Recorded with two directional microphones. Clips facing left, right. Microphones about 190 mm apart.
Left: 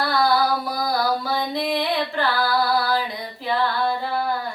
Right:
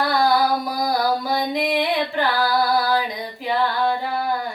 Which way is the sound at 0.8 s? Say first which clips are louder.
Right 2 dB; 15° right (ahead or behind).